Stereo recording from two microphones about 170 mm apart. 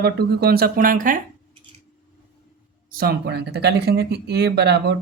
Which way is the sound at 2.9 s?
65° right (ahead or behind).